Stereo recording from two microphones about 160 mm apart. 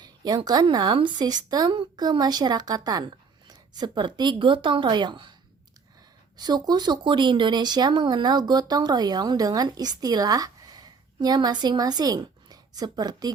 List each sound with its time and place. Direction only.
0.0 s speech: 25° right (ahead or behind)
6.3 s speech: 25° right (ahead or behind)